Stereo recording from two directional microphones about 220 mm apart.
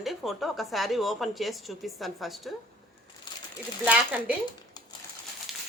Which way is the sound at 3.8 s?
5° right (ahead or behind).